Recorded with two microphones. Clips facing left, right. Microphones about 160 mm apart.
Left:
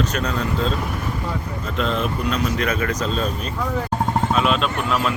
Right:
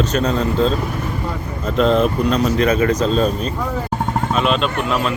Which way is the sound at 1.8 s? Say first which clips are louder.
Right 8 dB; 40° right (ahead or behind).